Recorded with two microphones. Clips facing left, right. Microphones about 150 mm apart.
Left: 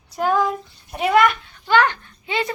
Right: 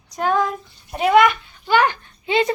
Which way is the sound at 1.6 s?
10° right (ahead or behind).